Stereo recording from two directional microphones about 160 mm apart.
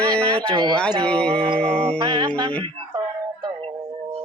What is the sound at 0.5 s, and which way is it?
Music, 30° right (ahead or behind).